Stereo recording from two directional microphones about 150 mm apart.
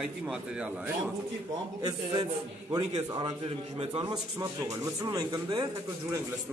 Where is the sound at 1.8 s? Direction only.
25° right (ahead or behind).